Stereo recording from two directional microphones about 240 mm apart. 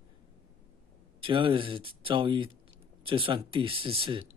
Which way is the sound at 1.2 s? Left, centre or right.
Right.